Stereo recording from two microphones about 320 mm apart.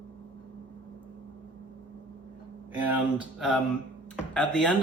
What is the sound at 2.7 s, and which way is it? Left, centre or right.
Speech, centre.